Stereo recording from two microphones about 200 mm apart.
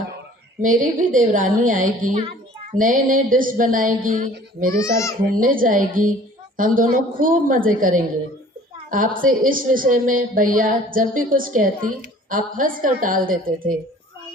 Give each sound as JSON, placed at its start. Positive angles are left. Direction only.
{"t": 0.6, "sound": "a woman's voice", "side_deg": -40}
{"t": 4.7, "sound": "speech", "side_deg": 15}
{"t": 5.2, "sound": "speech", "side_deg": -45}